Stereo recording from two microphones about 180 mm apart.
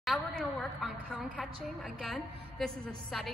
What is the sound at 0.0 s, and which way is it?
A woman's voice, centre (ahead or behind).